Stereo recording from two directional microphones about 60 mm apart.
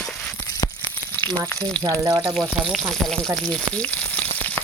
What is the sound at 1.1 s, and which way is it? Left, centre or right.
Frying, left.